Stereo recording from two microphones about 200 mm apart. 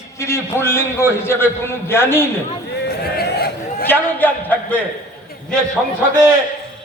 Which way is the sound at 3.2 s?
50° left (ahead or behind).